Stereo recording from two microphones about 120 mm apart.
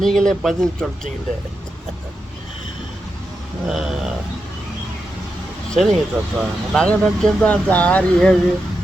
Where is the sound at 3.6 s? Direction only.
5° right (ahead or behind).